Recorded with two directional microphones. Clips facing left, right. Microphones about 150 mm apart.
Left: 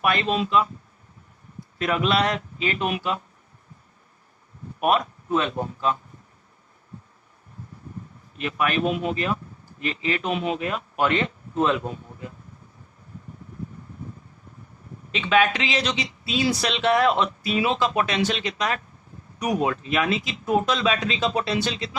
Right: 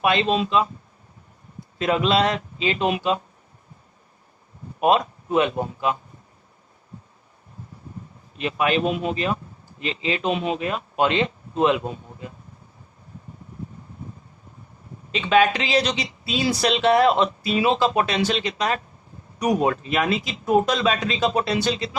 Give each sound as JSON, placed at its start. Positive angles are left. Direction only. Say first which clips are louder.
{"t": 0.0, "sound": "speech", "louder": "right 3 dB", "side_deg": -25}
{"t": 1.8, "sound": "speech", "louder": "right 2 dB", "side_deg": -25}
{"t": 4.8, "sound": "speech", "louder": "right 3 dB", "side_deg": -25}
{"t": 8.4, "sound": "speech", "louder": "right 3 dB", "side_deg": -25}
{"t": 15.1, "sound": "speech", "louder": "right 2 dB", "side_deg": -35}